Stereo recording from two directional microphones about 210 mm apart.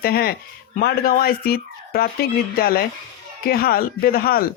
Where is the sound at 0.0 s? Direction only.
45° left (ahead or behind).